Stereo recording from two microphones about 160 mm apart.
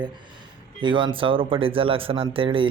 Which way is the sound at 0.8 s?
30° right (ahead or behind).